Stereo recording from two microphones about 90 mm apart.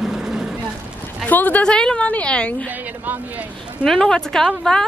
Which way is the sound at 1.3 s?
20° left (ahead or behind).